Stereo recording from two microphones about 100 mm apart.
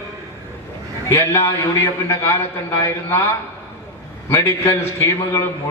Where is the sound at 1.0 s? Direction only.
25° left (ahead or behind).